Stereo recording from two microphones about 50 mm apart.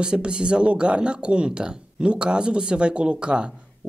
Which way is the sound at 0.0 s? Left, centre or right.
Centre.